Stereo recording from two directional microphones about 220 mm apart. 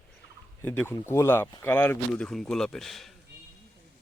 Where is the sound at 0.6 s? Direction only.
10° left (ahead or behind).